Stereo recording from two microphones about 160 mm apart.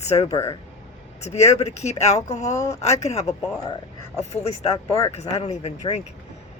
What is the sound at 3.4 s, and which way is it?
Speech, 25° left (ahead or behind).